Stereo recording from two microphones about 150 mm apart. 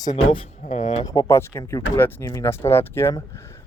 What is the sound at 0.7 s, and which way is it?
Speech, 55° left (ahead or behind).